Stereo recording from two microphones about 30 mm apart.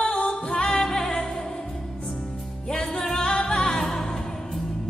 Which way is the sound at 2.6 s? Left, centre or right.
Left.